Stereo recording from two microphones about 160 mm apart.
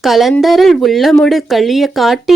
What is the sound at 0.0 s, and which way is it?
Speech, centre (ahead or behind).